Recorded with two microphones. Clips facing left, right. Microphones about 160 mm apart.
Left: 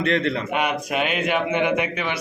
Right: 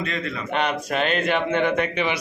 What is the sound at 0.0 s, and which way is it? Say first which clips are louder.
Speech: left 7 dB; 65° left (ahead or behind).